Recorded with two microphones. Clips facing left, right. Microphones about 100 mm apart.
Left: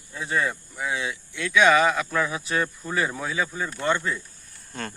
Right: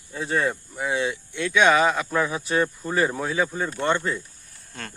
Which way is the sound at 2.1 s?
30° right (ahead or behind).